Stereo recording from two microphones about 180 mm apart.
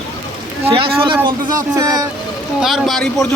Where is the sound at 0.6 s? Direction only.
30° right (ahead or behind).